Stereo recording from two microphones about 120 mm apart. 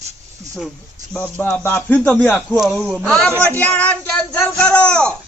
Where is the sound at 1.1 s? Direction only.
15° left (ahead or behind).